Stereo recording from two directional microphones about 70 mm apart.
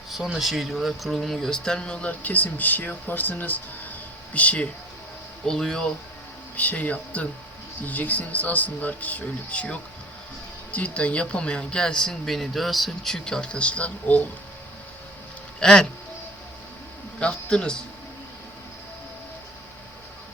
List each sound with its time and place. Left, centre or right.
0.3 s speech: centre
5.5 s speech: centre
6.6 s speech: left
15.6 s speech: centre
17.2 s speech: centre